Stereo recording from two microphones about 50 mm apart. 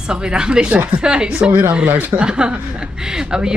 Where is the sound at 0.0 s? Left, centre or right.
Centre.